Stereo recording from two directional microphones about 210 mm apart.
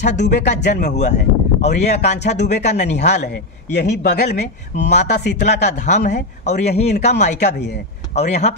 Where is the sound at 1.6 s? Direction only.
35° left (ahead or behind).